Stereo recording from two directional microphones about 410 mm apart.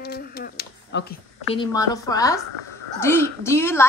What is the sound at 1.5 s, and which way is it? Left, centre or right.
A woman's voice, centre.